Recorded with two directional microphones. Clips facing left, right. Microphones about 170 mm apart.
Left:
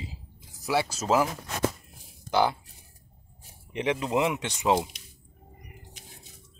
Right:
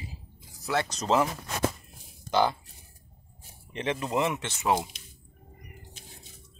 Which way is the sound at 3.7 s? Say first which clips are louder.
Left 2 dB; 15° left (ahead or behind).